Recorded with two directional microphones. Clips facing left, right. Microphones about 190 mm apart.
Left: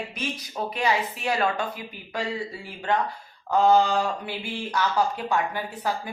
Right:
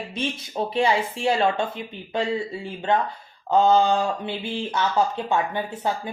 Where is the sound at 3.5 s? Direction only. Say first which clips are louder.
Right 2 dB; 25° right (ahead or behind).